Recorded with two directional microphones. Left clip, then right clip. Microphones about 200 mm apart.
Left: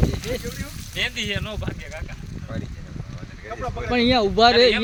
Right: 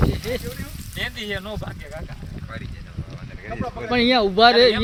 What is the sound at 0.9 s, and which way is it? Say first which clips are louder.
Speech: left 3 dB; 15° left (ahead or behind).